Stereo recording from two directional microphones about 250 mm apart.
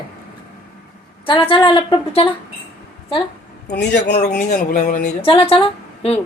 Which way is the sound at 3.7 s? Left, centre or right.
Left.